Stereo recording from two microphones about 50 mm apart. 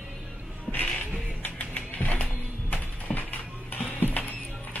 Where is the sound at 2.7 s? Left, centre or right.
Left.